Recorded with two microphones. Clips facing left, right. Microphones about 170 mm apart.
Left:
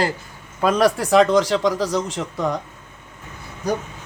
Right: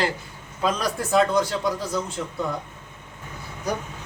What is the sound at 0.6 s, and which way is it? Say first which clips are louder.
A man's voice: left 7 dB; 65° left (ahead or behind).